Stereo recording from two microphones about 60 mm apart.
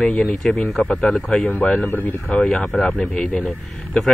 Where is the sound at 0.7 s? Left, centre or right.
Centre.